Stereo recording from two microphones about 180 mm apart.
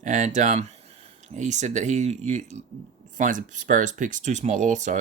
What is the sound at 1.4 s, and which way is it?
Speech, 40° right (ahead or behind).